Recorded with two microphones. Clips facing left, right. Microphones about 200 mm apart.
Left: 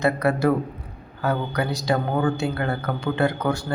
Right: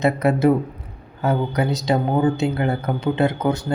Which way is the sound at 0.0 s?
20° right (ahead or behind).